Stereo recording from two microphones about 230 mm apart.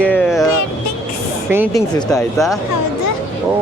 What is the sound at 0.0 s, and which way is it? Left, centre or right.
Music, centre.